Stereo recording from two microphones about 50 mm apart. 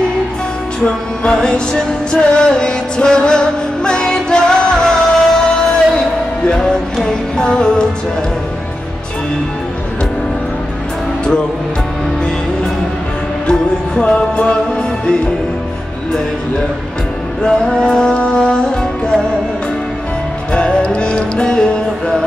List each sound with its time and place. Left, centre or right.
0.8 s music: centre
7.1 s music: centre
13.5 s music: centre
17.4 s music: centre
20.5 s music: left